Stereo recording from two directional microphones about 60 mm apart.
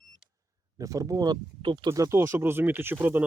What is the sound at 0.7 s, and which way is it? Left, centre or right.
Speech, right.